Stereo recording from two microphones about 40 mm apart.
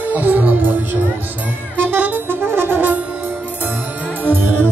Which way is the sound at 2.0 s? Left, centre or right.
Right.